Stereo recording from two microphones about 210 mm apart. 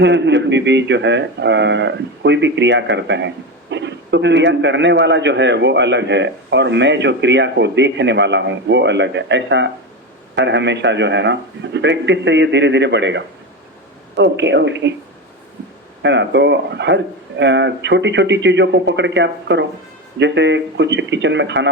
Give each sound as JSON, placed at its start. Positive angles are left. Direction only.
{"t": 0.0, "sound": "speech", "side_deg": -55}
{"t": 16.0, "sound": "speech", "side_deg": -55}